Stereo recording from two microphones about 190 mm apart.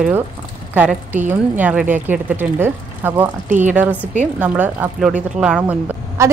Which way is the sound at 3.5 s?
40° right (ahead or behind).